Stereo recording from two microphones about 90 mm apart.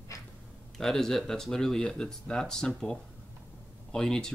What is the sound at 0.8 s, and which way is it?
Speech, 5° left (ahead or behind).